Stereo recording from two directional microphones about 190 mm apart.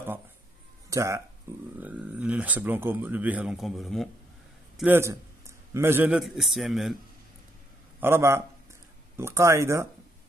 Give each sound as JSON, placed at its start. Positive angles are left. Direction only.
{"t": 0.8, "sound": "speech", "side_deg": -15}
{"t": 4.7, "sound": "a man's voice", "side_deg": -10}
{"t": 8.0, "sound": "speech", "side_deg": -15}